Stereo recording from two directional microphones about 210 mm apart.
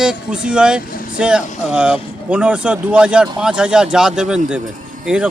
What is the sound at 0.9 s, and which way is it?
Vehicle, 40° left (ahead or behind).